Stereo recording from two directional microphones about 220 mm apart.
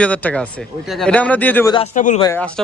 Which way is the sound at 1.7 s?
30° left (ahead or behind).